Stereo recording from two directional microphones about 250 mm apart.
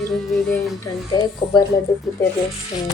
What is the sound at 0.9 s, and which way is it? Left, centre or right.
Speech, centre.